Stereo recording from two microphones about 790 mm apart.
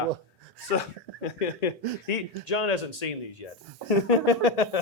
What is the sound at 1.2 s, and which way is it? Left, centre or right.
Speech, left.